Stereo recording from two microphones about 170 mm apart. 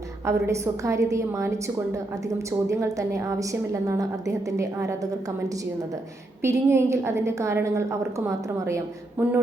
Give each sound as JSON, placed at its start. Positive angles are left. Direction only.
{"t": 0.3, "sound": "a woman's voice", "side_deg": -15}
{"t": 6.4, "sound": "a woman's voice", "side_deg": -15}